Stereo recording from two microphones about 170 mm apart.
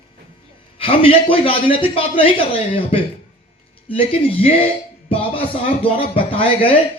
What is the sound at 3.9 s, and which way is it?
Speech, 35° left (ahead or behind).